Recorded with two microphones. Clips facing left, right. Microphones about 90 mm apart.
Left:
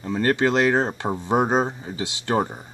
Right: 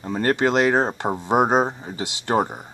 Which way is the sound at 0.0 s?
30° right (ahead or behind).